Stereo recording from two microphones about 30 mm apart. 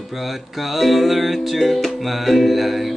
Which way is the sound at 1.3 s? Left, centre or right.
Centre.